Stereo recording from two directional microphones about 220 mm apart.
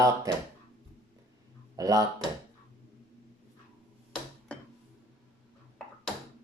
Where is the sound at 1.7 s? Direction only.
15° right (ahead or behind).